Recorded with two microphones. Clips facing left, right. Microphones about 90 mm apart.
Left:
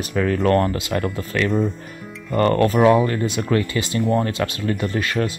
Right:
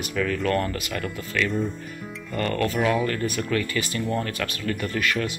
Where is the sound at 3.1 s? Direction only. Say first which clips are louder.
Left 4 dB; 20° left (ahead or behind).